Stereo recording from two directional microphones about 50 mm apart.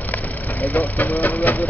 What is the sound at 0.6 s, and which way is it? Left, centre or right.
Speech, left.